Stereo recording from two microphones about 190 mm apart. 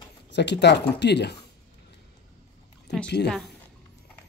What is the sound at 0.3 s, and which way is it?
Speech, 65° left (ahead or behind).